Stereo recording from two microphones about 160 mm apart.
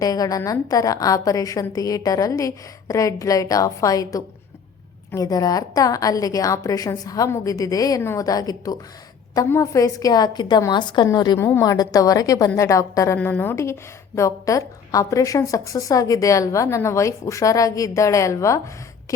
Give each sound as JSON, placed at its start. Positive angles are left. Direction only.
{"t": 0.0, "sound": "a woman's voice", "side_deg": 20}